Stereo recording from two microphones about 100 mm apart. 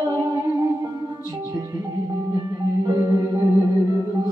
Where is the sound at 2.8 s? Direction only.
35° right (ahead or behind).